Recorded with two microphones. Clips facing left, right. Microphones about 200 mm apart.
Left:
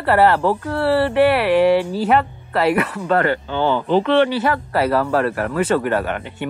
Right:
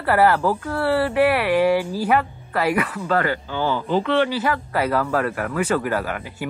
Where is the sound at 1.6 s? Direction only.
25° left (ahead or behind).